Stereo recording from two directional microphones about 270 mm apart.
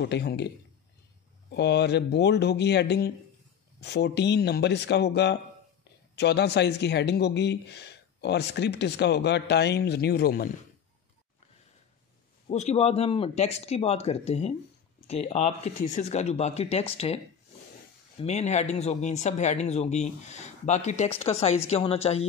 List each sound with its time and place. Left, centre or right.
0.0 s speech: left
1.5 s speech: left
12.4 s speech: left
18.2 s speech: left